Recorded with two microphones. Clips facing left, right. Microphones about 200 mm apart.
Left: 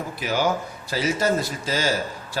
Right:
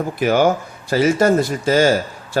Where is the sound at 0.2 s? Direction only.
55° right (ahead or behind).